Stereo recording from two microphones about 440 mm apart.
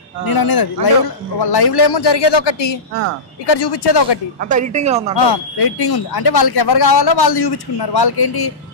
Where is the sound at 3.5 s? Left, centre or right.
Left.